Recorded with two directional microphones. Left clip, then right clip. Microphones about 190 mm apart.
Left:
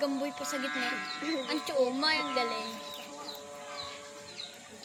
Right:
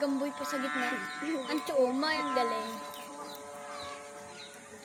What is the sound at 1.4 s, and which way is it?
Speech, 30° right (ahead or behind).